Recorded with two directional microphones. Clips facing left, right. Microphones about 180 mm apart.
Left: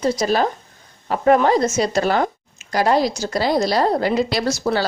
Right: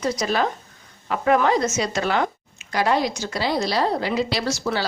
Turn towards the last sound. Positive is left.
turn(degrees=45)  # may be behind; listen again after turning